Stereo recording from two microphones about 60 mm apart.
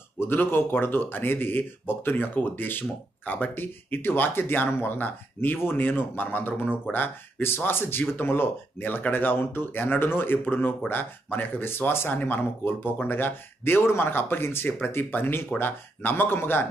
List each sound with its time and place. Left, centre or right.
0.2 s speech: left